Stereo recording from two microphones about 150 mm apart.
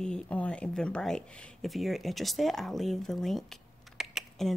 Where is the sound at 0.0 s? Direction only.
5° left (ahead or behind).